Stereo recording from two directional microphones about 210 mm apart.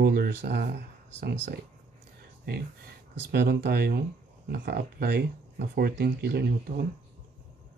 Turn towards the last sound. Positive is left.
turn(degrees=-50)  # may be behind; listen again after turning